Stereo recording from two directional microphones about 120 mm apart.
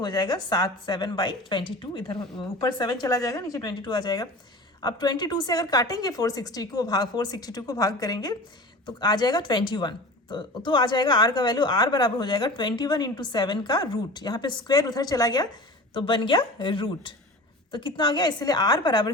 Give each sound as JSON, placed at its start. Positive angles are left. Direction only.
{"t": 0.0, "sound": "speech", "side_deg": 35}
{"t": 16.0, "sound": "a woman's voice", "side_deg": 45}